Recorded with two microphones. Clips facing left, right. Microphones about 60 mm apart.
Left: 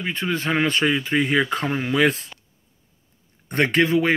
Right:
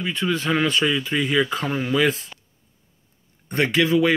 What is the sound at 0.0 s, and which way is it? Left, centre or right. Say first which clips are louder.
Speech: right 1 dB; left.